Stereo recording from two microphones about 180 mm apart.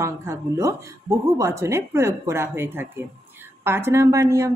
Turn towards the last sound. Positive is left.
turn(degrees=-15)  # may be behind; listen again after turning